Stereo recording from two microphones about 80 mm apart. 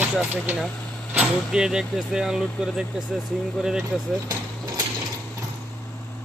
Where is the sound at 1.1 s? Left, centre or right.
Centre.